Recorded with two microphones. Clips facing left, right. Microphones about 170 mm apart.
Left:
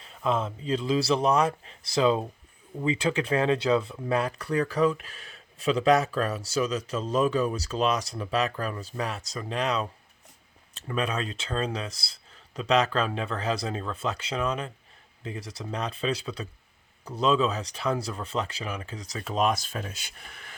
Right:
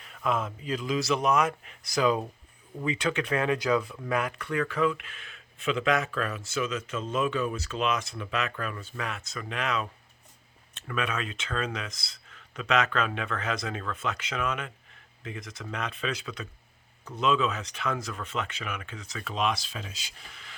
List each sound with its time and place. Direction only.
0.0 s speech: 30° left (ahead or behind)
4.2 s speech: 35° left (ahead or behind); by 20.5 s 55° left (ahead or behind)